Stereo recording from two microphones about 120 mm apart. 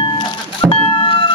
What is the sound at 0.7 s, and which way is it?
Vehicle, 50° left (ahead or behind).